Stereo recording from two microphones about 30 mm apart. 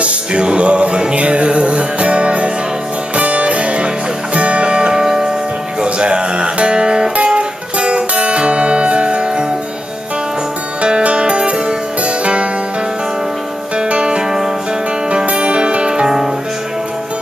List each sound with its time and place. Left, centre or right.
0.0 s music: right
5.9 s music: right
10.8 s music: right
13.8 s music: right
15.3 s music: right